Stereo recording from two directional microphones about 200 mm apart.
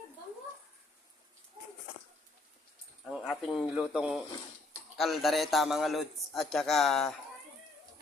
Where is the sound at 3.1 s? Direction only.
Centre (ahead or behind).